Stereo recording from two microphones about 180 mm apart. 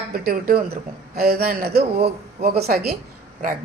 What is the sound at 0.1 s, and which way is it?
A man's voice, 55° right (ahead or behind).